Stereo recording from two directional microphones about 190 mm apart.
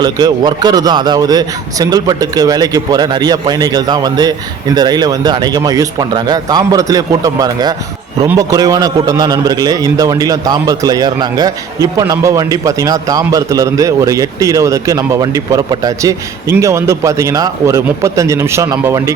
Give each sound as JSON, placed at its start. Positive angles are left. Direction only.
{"t": 0.0, "sound": "a man's voice", "side_deg": -20}